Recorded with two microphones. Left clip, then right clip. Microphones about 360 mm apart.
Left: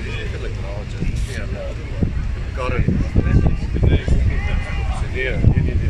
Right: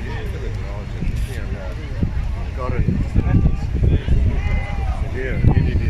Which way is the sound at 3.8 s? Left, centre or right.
Left.